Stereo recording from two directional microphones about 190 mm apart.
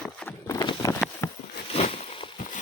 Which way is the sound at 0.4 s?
20° left (ahead or behind).